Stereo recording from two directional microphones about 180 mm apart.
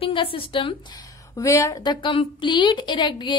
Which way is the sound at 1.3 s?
15° left (ahead or behind).